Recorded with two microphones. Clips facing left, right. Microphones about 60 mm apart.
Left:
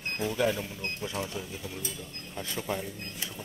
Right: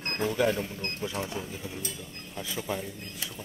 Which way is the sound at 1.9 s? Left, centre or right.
Centre.